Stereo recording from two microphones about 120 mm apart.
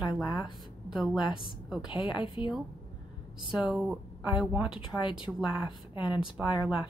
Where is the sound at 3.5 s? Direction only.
5° right (ahead or behind).